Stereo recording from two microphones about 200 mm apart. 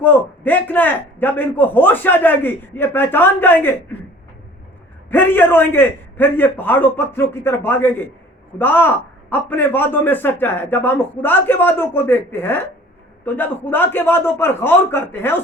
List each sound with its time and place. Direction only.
0.0 s a man's voice: 10° left (ahead or behind)
5.1 s a man's voice: 10° left (ahead or behind)